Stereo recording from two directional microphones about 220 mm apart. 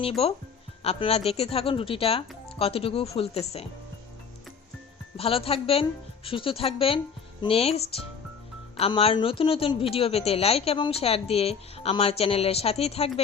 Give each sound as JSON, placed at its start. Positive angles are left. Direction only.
{"t": 0.2, "sound": "a woman's voice", "side_deg": 25}
{"t": 5.1, "sound": "a woman's voice", "side_deg": 25}
{"t": 8.8, "sound": "a woman's voice", "side_deg": 25}